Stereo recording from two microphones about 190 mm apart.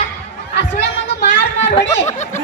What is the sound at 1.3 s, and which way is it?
Children playing, 70° left (ahead or behind).